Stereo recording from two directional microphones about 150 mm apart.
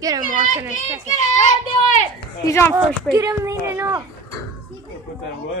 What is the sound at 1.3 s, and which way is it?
Speech, 55° left (ahead or behind).